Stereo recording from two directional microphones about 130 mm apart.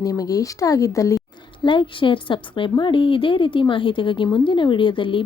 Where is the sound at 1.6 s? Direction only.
40° left (ahead or behind).